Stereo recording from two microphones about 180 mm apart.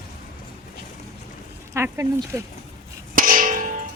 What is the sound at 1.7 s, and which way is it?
Speech, 15° right (ahead or behind).